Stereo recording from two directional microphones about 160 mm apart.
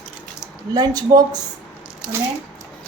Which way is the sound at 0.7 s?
25° right (ahead or behind).